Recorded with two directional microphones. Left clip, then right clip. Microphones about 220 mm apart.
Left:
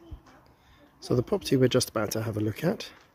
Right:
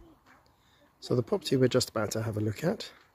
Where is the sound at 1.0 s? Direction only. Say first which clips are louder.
Left 2 dB; 5° right (ahead or behind).